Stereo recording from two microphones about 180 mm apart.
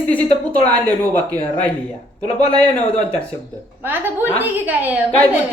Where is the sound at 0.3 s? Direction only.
35° left (ahead or behind).